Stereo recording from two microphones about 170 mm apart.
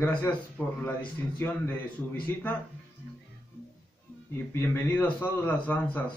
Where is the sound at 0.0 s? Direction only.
10° left (ahead or behind).